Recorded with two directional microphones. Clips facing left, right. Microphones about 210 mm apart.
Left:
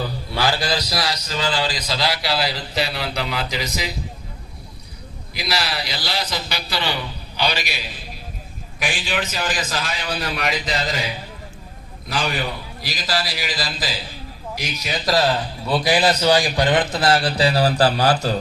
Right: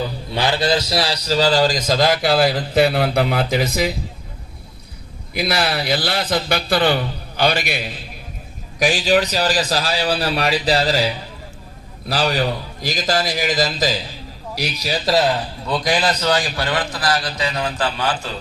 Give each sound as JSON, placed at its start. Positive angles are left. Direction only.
{"t": 0.3, "sound": "a man's voice", "side_deg": -20}
{"t": 5.3, "sound": "a man's voice", "side_deg": -55}
{"t": 8.8, "sound": "a man's voice", "side_deg": -40}
{"t": 14.5, "sound": "a man's voice", "side_deg": -35}
{"t": 15.6, "sound": "a man's voice", "side_deg": 5}